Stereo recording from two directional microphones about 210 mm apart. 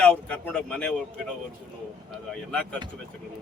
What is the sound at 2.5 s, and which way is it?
Speech, 5° left (ahead or behind).